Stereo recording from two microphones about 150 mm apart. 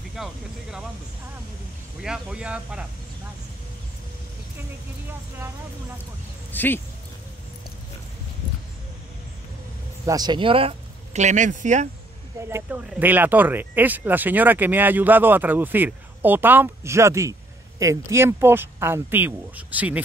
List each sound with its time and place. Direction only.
0.1 s speech: 5° right (ahead or behind)
2.0 s speech: 5° right (ahead or behind)
6.5 s speech: 10° left (ahead or behind)
10.0 s speech: 25° right (ahead or behind); by 11.9 s 55° right (ahead or behind)
12.4 s speech: 15° right (ahead or behind)